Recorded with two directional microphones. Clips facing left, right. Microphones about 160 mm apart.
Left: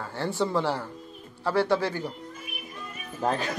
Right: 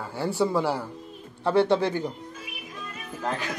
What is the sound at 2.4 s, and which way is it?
Music, 90° right.